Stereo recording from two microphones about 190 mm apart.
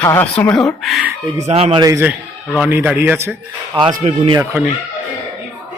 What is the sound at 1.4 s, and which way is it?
A man's voice, 30° right (ahead or behind).